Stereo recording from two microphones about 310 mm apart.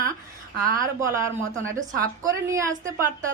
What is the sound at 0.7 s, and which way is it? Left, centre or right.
A woman's voice, centre.